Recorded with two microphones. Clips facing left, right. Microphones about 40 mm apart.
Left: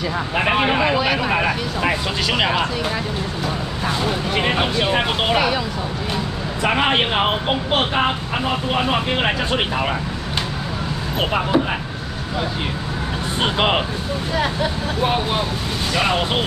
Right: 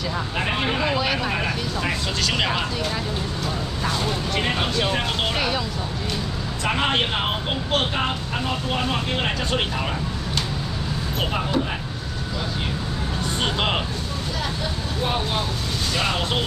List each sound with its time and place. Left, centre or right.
0.4 s speech: left
1.3 s speech: left
3.8 s speech: centre
6.6 s speech: left
11.1 s speech: left
13.4 s speech: left